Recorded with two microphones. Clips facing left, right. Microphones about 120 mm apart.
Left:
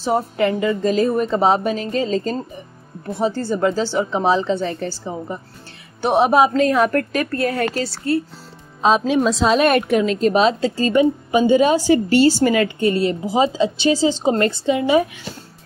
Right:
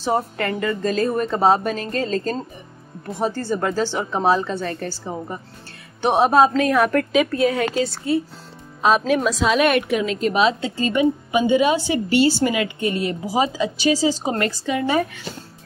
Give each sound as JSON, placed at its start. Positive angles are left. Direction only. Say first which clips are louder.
{"t": 0.0, "sound": "a woman's voice", "louder": "left 3 dB", "side_deg": 10}
{"t": 4.2, "sound": "a woman's voice", "louder": "even", "side_deg": -5}
{"t": 4.6, "sound": "a woman's voice", "louder": "left 3 dB", "side_deg": 15}
{"t": 6.2, "sound": "a woman's voice", "louder": "even", "side_deg": 10}
{"t": 6.9, "sound": "a woman's voice", "louder": "right 2 dB", "side_deg": 0}
{"t": 8.8, "sound": "a woman's voice", "louder": "left 2 dB", "side_deg": 25}